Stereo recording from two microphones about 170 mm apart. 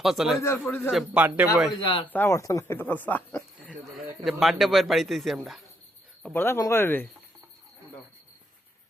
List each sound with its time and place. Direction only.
0.0 s speech: centre (ahead or behind)
0.4 s speech: 15° left (ahead or behind)
0.9 s speech: 5° right (ahead or behind)
1.8 s speech: 30° left (ahead or behind)
2.0 s speech: 15° left (ahead or behind)
4.2 s speech: centre (ahead or behind)
6.2 s speech: 10° left (ahead or behind)